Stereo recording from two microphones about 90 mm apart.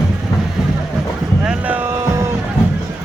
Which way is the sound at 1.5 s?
15° right (ahead or behind).